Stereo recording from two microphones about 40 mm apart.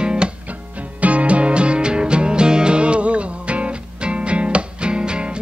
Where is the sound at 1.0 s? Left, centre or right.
Right.